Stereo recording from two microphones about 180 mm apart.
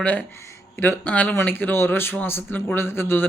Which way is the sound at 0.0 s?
10° left (ahead or behind).